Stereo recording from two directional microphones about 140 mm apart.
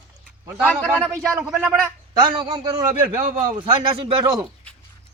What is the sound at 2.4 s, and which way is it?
A man's voice, 30° right (ahead or behind).